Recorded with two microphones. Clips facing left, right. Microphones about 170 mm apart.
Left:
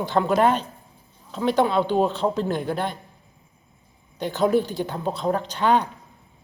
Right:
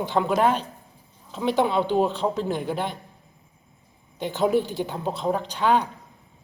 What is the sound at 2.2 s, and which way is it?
Speech, 5° right (ahead or behind).